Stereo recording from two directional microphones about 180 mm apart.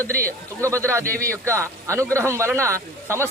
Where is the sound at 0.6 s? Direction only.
15° right (ahead or behind).